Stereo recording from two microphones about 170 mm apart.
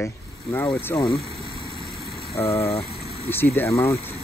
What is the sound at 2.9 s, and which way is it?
Vehicle, 35° left (ahead or behind).